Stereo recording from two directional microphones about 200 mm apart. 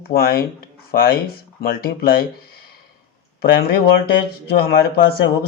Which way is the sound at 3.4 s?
50° left (ahead or behind).